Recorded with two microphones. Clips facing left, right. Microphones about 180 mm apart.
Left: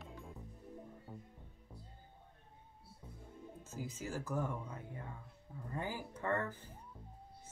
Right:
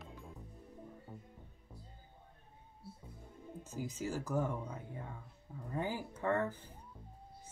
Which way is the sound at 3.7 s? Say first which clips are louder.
Right 4 dB; 20° right (ahead or behind).